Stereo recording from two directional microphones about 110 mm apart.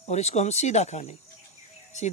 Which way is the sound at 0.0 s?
80° left.